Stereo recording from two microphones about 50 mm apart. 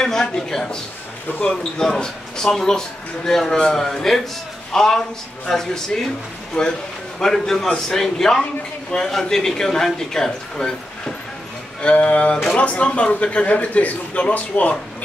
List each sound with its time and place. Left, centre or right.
0.0 s a man's voice: centre
11.8 s speech: left